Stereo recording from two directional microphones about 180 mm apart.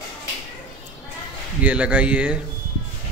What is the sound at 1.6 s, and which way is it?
Speech, 5° right (ahead or behind).